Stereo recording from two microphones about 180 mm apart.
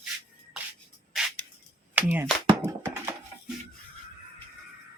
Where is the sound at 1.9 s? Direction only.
10° right (ahead or behind).